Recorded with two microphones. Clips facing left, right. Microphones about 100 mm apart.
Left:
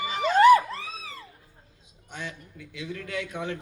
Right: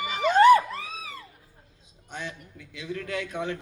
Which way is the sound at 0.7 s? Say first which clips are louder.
Right 1 dB; 30° left (ahead or behind).